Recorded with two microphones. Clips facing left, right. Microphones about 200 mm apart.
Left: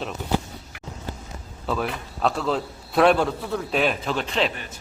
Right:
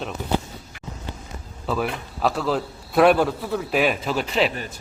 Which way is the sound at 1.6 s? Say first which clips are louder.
Right 1 dB; 5° right (ahead or behind).